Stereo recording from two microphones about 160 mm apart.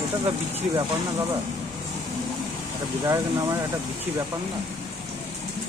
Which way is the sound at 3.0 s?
20° right (ahead or behind).